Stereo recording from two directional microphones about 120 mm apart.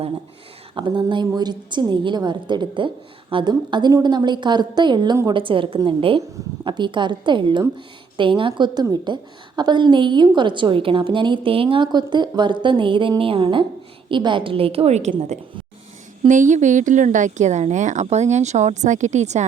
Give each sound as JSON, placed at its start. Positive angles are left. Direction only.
{"t": 0.8, "sound": "a woman's voice", "side_deg": -40}
{"t": 16.2, "sound": "speech", "side_deg": -90}